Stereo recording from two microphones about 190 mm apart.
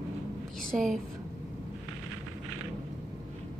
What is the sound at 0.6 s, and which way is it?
Speech, centre (ahead or behind).